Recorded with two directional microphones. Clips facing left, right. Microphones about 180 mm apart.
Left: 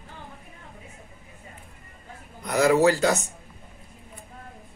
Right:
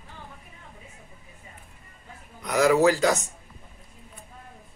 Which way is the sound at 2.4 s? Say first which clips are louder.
Even; 5° left (ahead or behind).